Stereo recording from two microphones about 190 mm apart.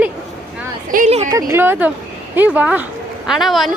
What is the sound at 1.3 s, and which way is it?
A woman's voice, 15° right (ahead or behind).